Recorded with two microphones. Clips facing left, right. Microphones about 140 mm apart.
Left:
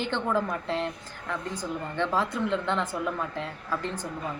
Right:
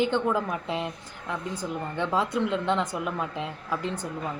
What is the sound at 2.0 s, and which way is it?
Speech, 15° right (ahead or behind).